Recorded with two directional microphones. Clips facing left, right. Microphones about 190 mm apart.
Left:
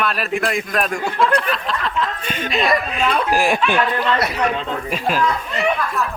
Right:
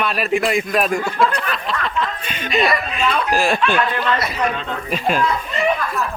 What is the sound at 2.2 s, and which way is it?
Chuckle, 45° left (ahead or behind).